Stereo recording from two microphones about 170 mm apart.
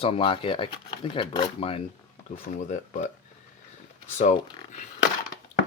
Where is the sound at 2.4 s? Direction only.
45° left (ahead or behind).